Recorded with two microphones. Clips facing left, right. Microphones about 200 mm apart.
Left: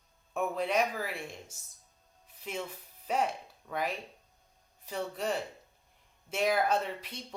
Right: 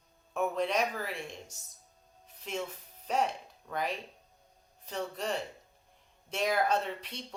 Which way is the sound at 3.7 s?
5° left (ahead or behind).